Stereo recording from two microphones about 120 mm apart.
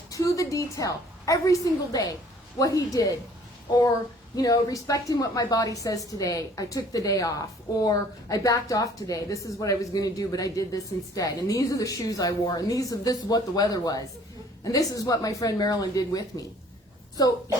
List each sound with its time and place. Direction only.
0.1 s a woman's voice: 25° left (ahead or behind)
4.4 s a woman's voice: 30° left (ahead or behind)